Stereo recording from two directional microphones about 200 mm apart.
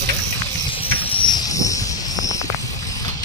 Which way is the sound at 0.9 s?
20° left (ahead or behind).